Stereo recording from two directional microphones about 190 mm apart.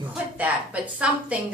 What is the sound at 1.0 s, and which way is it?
Speech, 5° right (ahead or behind).